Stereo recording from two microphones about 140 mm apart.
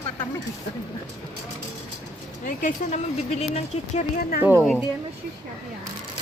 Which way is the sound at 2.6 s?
60° left (ahead or behind).